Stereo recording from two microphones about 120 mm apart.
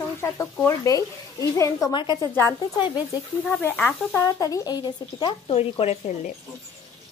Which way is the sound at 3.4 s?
10° left (ahead or behind).